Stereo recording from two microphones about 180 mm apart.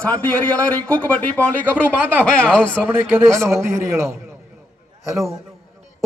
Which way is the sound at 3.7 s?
15° right (ahead or behind).